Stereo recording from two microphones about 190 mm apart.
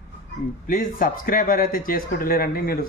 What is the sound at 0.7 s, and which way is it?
Speech, 45° left (ahead or behind).